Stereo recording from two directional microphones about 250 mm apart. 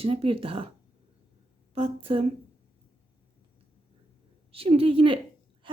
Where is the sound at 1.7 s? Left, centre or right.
Right.